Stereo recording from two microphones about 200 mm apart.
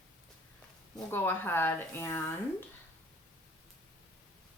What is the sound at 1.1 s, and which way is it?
Speech, 10° left (ahead or behind).